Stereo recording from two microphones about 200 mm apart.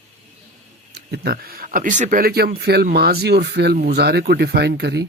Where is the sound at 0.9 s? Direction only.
55° right (ahead or behind).